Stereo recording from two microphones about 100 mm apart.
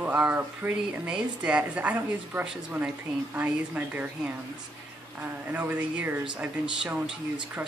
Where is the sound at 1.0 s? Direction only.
10° right (ahead or behind).